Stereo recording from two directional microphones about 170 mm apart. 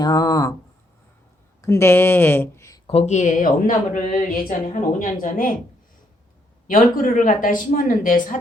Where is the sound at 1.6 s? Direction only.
15° left (ahead or behind).